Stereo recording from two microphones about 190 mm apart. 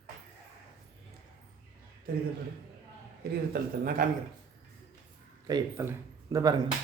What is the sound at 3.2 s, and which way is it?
Speech, 55° right (ahead or behind).